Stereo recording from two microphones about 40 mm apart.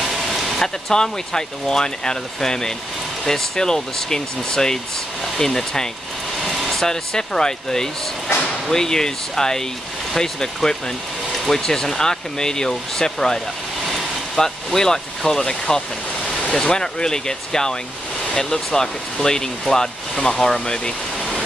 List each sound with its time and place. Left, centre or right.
0.0 s a sound: centre
0.6 s speech: centre
6.4 s vehicle: centre
6.8 s speech: centre